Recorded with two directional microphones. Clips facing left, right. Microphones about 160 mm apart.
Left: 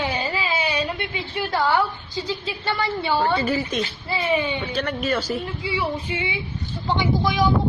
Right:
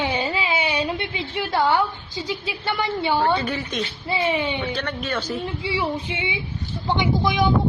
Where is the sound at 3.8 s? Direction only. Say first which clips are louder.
Right 2 dB; 20° right (ahead or behind).